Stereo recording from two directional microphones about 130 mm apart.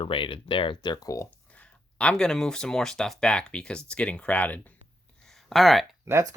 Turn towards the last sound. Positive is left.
turn(degrees=-25)  # may be behind; listen again after turning